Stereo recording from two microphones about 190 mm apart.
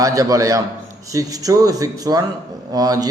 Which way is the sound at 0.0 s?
20° right (ahead or behind).